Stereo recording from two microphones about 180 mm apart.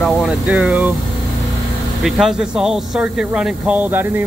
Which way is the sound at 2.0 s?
Centre (ahead or behind).